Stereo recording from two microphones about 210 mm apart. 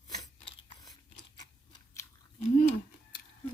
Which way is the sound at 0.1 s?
20° left (ahead or behind).